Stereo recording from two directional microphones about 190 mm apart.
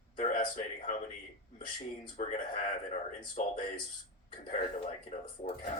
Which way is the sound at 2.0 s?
40° left (ahead or behind).